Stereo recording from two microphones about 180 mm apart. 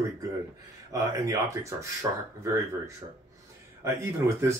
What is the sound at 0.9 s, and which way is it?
Speech, 20° right (ahead or behind).